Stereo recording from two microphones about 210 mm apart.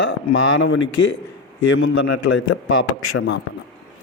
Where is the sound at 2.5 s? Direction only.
70° left (ahead or behind).